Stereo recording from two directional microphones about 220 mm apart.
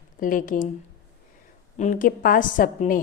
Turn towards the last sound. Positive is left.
turn(degrees=40)  # may be behind; listen again after turning